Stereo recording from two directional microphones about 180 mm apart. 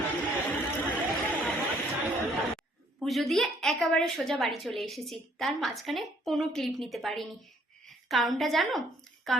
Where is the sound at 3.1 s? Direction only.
Centre (ahead or behind).